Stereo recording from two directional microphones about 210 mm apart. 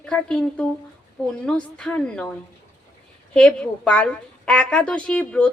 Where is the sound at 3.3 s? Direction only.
5° left (ahead or behind).